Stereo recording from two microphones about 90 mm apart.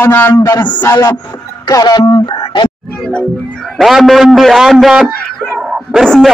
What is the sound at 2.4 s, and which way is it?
Music, 60° left (ahead or behind).